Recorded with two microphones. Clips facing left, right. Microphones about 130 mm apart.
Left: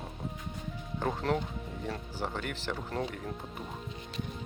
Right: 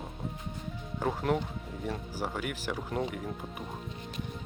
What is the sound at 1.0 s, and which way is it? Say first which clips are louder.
Speech: right 1 dB; 5° right (ahead or behind).